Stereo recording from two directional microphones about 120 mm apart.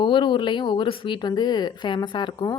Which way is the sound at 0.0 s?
40° left (ahead or behind).